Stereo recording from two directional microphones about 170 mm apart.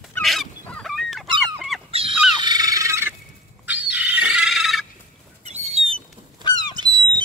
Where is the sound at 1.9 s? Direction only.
35° right (ahead or behind).